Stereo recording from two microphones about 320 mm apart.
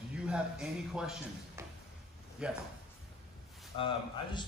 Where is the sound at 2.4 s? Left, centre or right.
Centre.